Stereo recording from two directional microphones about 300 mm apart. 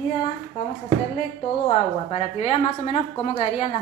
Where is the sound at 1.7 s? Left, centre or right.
Centre.